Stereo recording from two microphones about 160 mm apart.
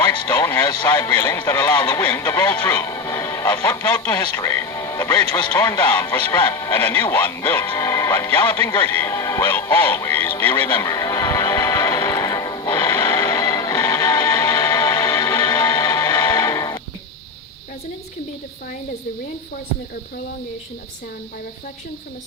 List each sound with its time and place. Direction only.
0.3 s speech: 15° left (ahead or behind)
0.6 s speech: 25° left (ahead or behind)
0.9 s speech: 15° left (ahead or behind)
10.9 s music: 20° left (ahead or behind)